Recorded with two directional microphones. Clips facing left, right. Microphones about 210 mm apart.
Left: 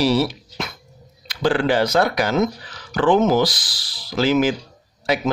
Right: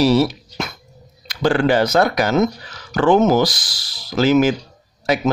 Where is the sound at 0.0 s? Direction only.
45° right (ahead or behind).